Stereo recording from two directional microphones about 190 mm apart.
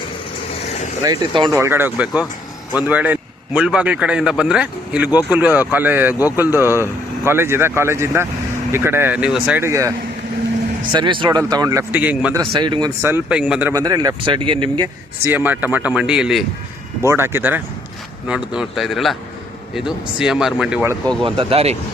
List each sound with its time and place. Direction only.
1.0 s speech: 20° right (ahead or behind)
10.9 s speech: 25° right (ahead or behind); by 12.4 s 10° right (ahead or behind)
12.5 s speech: 25° right (ahead or behind)
15.2 s speech: 10° right (ahead or behind)
21.2 s speech: 30° right (ahead or behind)